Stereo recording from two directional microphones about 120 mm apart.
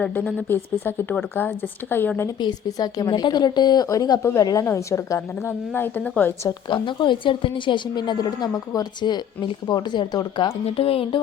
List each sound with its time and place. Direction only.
0.0 s speech: 10° left (ahead or behind)
0.4 s speech: 20° left (ahead or behind)
2.4 s a woman's voice: 35° left (ahead or behind); by 6.5 s 15° left (ahead or behind)
6.7 s a woman's voice: 40° left (ahead or behind)
10.7 s speech: 50° left (ahead or behind)